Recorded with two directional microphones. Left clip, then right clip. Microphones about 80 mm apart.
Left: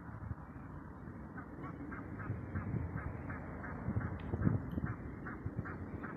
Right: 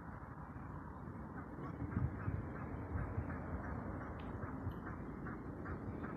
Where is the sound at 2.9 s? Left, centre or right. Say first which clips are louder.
Left 1 dB; right.